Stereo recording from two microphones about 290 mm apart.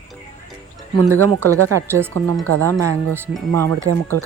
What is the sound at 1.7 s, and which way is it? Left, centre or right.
Speech, centre.